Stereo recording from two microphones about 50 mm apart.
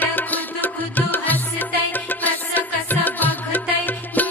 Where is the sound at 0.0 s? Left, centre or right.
Left.